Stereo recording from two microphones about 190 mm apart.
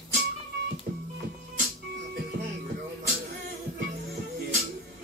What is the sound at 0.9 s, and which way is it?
Music, 50° right (ahead or behind).